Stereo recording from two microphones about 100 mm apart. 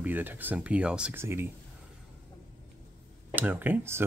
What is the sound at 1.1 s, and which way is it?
Speech, 25° right (ahead or behind).